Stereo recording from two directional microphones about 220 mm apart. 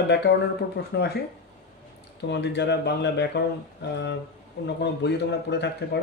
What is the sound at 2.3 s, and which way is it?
Speech, 50° left (ahead or behind).